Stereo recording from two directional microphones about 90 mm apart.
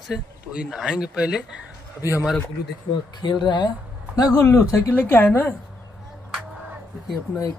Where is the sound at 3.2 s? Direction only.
55° left (ahead or behind).